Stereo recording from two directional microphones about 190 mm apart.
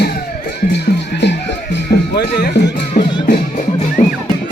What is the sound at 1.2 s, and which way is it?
Music, 65° left (ahead or behind).